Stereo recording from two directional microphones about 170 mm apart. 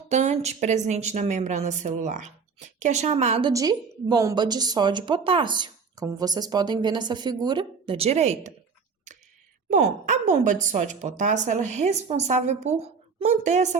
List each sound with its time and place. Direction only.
0.1 s a woman's voice: 40° right (ahead or behind)
3.5 s a woman's voice: 20° right (ahead or behind); by 8.5 s 40° right (ahead or behind)
9.6 s a woman's voice: 45° right (ahead or behind)